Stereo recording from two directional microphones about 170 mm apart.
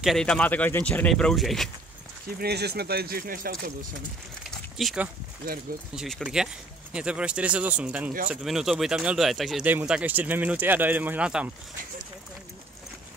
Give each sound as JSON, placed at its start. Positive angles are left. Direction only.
{"t": 0.0, "sound": "speech", "side_deg": 0}
{"t": 2.2, "sound": "speech", "side_deg": -65}
{"t": 4.7, "sound": "speech", "side_deg": -5}